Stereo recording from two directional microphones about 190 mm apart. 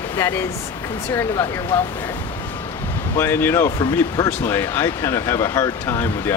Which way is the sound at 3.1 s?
15° left (ahead or behind).